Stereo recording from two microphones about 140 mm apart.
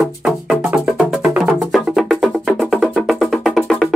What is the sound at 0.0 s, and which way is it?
Music, centre (ahead or behind).